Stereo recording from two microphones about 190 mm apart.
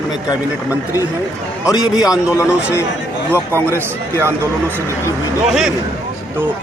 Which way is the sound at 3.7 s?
15° right (ahead or behind).